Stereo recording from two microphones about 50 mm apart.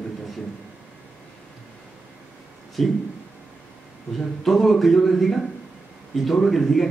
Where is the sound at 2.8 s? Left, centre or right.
Centre.